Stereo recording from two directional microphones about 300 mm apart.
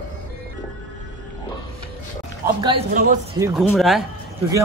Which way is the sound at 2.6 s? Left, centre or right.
Right.